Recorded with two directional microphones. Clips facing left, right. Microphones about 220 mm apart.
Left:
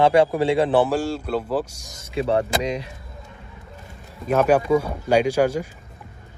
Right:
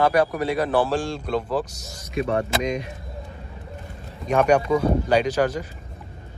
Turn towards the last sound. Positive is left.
turn(degrees=10)  # may be behind; listen again after turning